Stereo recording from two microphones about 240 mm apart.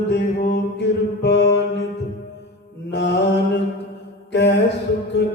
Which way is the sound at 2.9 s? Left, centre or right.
Left.